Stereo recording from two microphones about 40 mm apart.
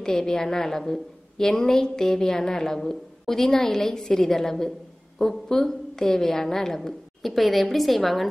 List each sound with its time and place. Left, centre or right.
0.0 s a woman's voice: centre
7.2 s a woman's voice: centre